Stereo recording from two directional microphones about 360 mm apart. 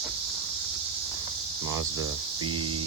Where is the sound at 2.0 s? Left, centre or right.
Right.